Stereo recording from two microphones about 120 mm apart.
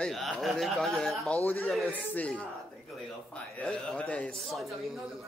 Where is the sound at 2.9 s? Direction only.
Centre (ahead or behind).